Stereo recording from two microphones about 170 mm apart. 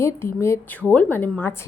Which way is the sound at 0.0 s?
15° left (ahead or behind).